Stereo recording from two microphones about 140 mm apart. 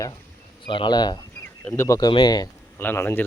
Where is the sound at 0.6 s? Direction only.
35° left (ahead or behind).